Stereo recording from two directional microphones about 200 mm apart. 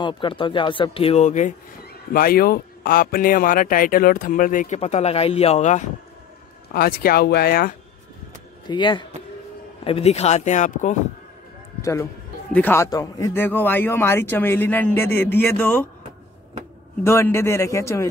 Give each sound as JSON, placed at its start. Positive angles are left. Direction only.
{"t": 0.0, "sound": "speech", "side_deg": 25}
{"t": 2.1, "sound": "speech", "side_deg": 45}
{"t": 6.7, "sound": "speech", "side_deg": 50}
{"t": 8.6, "sound": "speech", "side_deg": 25}
{"t": 11.8, "sound": "a man's voice", "side_deg": 15}
{"t": 17.0, "sound": "a man's voice", "side_deg": 15}